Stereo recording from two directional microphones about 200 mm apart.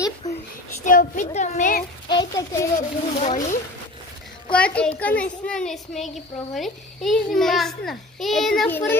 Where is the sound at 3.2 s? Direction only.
40° left (ahead or behind).